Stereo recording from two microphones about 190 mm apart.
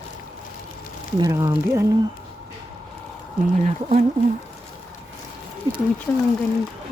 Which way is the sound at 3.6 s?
35° right (ahead or behind).